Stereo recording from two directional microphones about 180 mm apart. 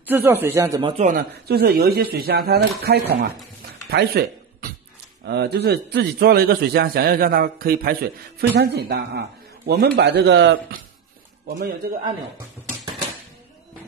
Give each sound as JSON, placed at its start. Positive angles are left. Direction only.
{"t": 0.0, "sound": "speech", "side_deg": -10}
{"t": 1.0, "sound": "a man's voice", "side_deg": -55}
{"t": 3.9, "sound": "a sound", "side_deg": -60}
{"t": 5.2, "sound": "a man's voice", "side_deg": -65}
{"t": 11.4, "sound": "a man's voice", "side_deg": -60}